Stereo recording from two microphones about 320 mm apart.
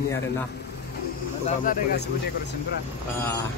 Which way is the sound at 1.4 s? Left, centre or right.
Left.